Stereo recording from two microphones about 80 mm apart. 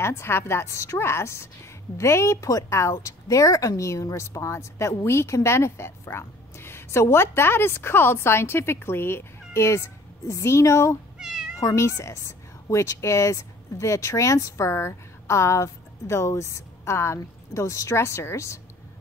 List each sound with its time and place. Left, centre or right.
0.0 s a woman's voice: left
11.1 s cat: centre
11.6 s a woman's voice: left